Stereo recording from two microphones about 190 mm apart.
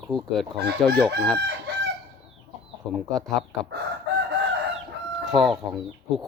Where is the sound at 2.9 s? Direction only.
Centre (ahead or behind).